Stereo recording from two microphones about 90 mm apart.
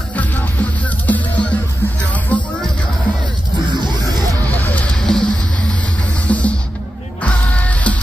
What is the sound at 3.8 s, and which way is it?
Music, 50° right (ahead or behind).